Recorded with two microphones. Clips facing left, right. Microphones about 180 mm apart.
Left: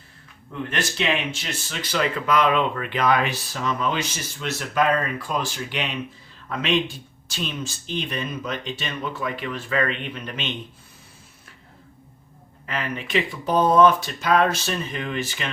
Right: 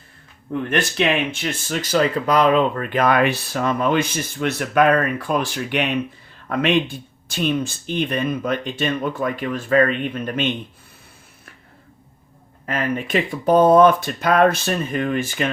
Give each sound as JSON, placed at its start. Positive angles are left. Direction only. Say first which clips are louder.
{"t": 0.7, "sound": "speech", "louder": "right 5 dB", "side_deg": -55}
{"t": 12.6, "sound": "speech", "louder": "right 6 dB", "side_deg": -45}